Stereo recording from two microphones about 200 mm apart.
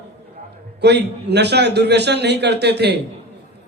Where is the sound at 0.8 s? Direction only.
55° right (ahead or behind).